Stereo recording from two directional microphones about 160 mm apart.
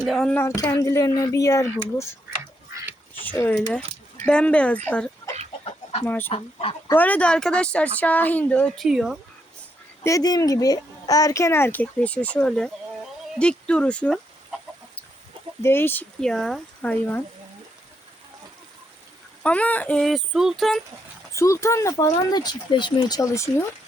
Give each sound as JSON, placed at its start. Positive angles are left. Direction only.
{"t": 0.1, "sound": "speech", "side_deg": 5}
{"t": 0.4, "sound": "speech", "side_deg": 20}
{"t": 3.2, "sound": "speech", "side_deg": 15}
{"t": 6.3, "sound": "speech", "side_deg": 35}
{"t": 6.9, "sound": "speech", "side_deg": 10}
{"t": 10.0, "sound": "speech", "side_deg": 20}
{"t": 15.6, "sound": "speech", "side_deg": 15}
{"t": 19.4, "sound": "speech", "side_deg": 10}
{"t": 21.3, "sound": "speech", "side_deg": 20}